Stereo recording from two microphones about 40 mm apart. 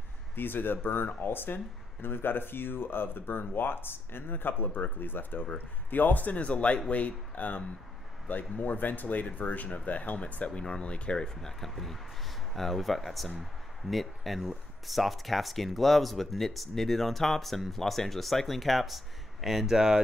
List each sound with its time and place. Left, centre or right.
0.4 s speech: left
11.2 s speech: centre